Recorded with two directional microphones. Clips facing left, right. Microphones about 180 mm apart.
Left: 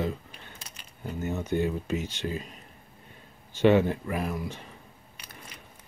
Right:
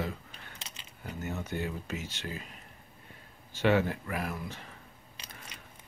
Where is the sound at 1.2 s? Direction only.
20° left (ahead or behind).